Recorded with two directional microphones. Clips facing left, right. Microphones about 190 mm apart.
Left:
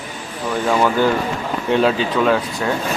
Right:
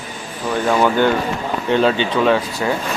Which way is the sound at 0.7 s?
Centre (ahead or behind).